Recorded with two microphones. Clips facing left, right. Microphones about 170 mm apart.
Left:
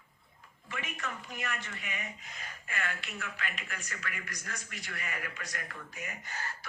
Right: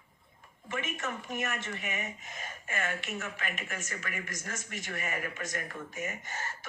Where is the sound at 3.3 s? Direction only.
20° right (ahead or behind).